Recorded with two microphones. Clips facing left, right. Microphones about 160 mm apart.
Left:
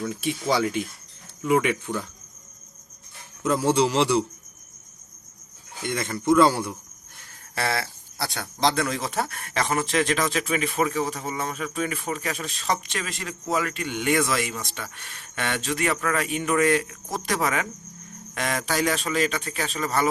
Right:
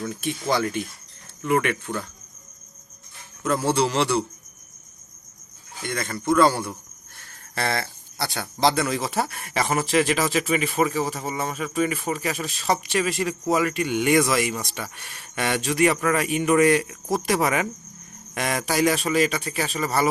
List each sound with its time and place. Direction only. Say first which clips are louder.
0.5 s a man's voice: even; 10° left (ahead or behind)
3.4 s a man's voice: left 1 dB; 15° left (ahead or behind)
5.8 s a man's voice: left 1 dB; 20° left (ahead or behind); by 20.1 s 10° right (ahead or behind)